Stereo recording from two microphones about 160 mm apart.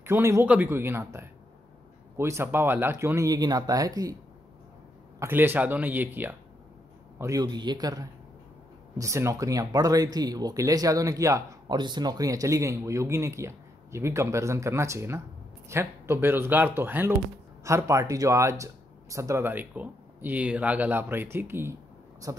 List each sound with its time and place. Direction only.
0.0 s speech: 15° right (ahead or behind)
5.2 s speech: 15° right (ahead or behind)